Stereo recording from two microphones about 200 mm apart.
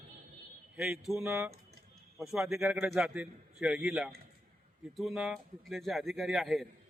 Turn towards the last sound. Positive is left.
turn(degrees=0)  # may be behind; listen again after turning